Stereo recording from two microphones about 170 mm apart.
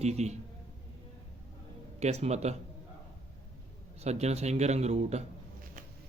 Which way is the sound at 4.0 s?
40° right (ahead or behind).